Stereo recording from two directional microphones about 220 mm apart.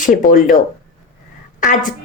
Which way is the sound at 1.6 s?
35° left (ahead or behind).